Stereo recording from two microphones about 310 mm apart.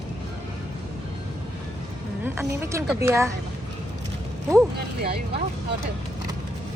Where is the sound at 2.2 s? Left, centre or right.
Centre.